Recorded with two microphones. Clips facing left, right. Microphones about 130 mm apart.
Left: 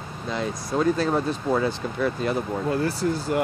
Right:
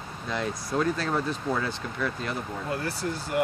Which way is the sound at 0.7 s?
15° left (ahead or behind).